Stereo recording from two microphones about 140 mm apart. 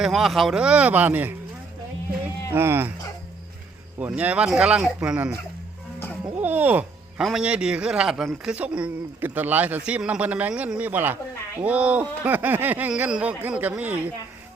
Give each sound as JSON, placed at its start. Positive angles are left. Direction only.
{"t": 0.0, "sound": "a man's voice", "side_deg": 0}
{"t": 2.5, "sound": "a man's voice", "side_deg": -15}
{"t": 4.0, "sound": "a man's voice", "side_deg": -10}
{"t": 6.4, "sound": "a man's voice", "side_deg": -15}